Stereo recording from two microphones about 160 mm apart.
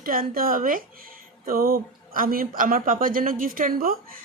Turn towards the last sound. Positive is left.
turn(degrees=-65)  # may be behind; listen again after turning